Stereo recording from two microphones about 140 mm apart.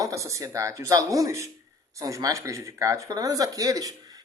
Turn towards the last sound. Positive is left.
turn(degrees=-25)  # may be behind; listen again after turning